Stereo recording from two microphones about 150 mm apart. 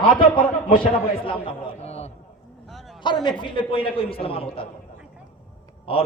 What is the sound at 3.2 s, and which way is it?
A man's voice, 35° left (ahead or behind).